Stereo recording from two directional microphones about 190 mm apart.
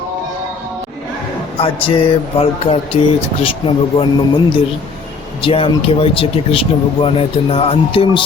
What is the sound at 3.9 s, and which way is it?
Speech, 25° left (ahead or behind).